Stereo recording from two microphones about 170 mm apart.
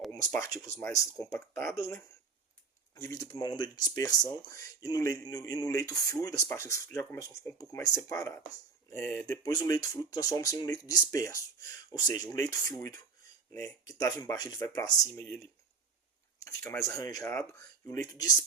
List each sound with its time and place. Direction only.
0.3 s speech: 20° left (ahead or behind)
16.8 s speech: 20° left (ahead or behind)